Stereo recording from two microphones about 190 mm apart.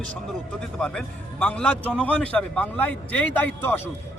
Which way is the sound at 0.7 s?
5° left (ahead or behind).